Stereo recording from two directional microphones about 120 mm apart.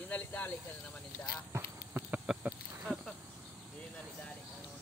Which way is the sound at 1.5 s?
15° right (ahead or behind).